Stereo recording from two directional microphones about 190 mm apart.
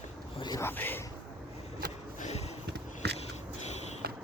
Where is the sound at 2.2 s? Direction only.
35° left (ahead or behind).